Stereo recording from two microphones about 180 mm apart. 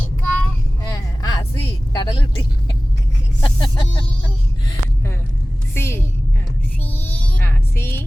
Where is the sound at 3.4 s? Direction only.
25° left (ahead or behind).